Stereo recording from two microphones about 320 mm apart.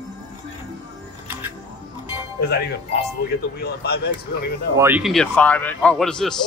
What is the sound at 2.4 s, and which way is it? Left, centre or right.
Speech, left.